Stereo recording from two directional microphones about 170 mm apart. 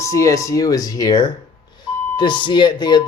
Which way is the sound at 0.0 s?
20° left (ahead or behind).